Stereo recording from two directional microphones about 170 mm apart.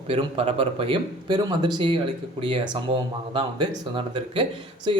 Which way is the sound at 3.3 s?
30° right (ahead or behind).